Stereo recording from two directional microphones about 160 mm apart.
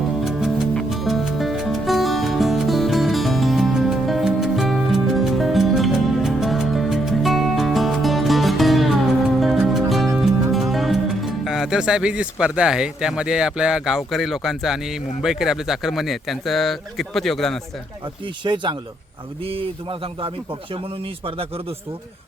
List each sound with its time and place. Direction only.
0.3 s music: centre (ahead or behind)
10.2 s speech: centre (ahead or behind)
18.4 s a man's voice: 30° right (ahead or behind)